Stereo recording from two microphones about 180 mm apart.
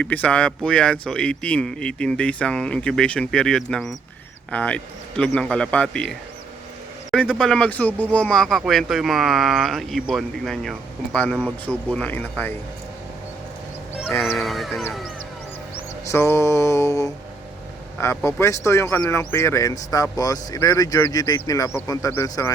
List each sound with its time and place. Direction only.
0.0 s speech: 10° left (ahead or behind)
13.9 s a sound: 5° right (ahead or behind)
15.7 s mantra: 15° left (ahead or behind)
17.9 s speech: 15° left (ahead or behind)